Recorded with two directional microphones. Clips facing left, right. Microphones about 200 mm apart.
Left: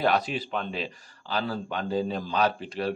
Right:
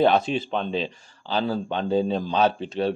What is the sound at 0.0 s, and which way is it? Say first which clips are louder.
A man's voice: right 6 dB; 25° right (ahead or behind).